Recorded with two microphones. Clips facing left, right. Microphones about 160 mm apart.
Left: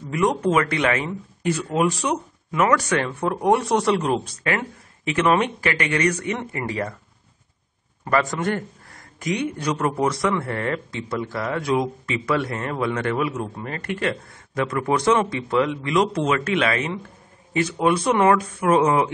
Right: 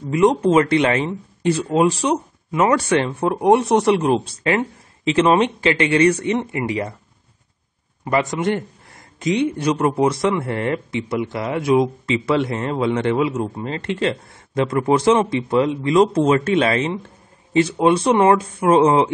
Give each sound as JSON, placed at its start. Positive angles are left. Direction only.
{"t": 0.1, "sound": "a man's voice", "side_deg": -25}
{"t": 8.0, "sound": "a man's voice", "side_deg": -20}